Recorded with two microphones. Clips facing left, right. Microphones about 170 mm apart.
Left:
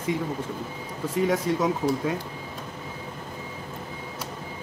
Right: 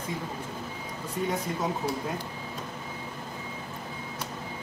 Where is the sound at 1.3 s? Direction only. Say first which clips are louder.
Left 6 dB; 90° left.